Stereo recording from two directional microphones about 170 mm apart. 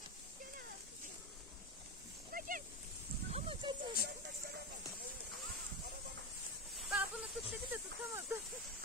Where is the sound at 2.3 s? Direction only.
55° right (ahead or behind).